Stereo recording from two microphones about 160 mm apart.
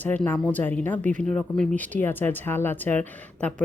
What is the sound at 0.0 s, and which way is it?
Speech, 10° left (ahead or behind).